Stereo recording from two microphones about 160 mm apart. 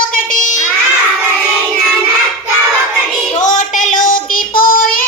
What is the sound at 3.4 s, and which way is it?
Child singing, 50° left (ahead or behind).